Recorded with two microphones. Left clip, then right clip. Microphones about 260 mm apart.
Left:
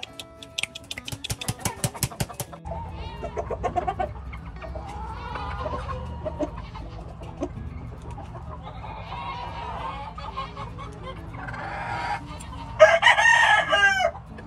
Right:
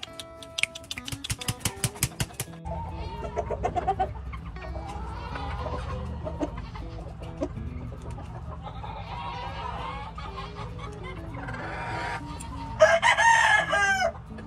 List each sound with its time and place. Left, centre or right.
1.3 s a sound: centre
3.2 s chicken: centre
5.2 s music: centre
9.3 s chicken: centre